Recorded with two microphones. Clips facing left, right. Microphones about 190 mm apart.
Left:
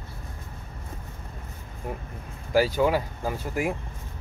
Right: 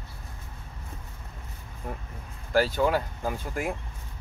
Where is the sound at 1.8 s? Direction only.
10° left (ahead or behind).